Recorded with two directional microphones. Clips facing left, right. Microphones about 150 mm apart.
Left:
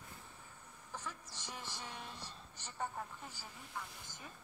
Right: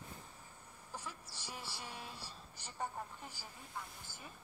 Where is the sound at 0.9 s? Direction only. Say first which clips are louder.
Left 1 dB; 10° right (ahead or behind).